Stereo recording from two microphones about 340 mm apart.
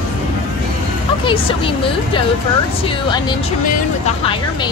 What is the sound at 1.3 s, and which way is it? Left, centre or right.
Speech, centre.